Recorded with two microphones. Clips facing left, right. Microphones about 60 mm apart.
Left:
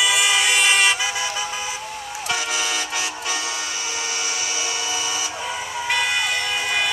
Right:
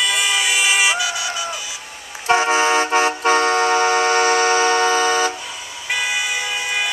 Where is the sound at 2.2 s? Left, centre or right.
Right.